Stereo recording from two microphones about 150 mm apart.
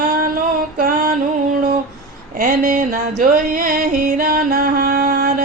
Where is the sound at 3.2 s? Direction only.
65° right (ahead or behind); by 5.3 s 80° right.